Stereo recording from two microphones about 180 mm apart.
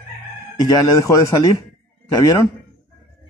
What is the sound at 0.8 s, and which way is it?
Speech, 20° left (ahead or behind).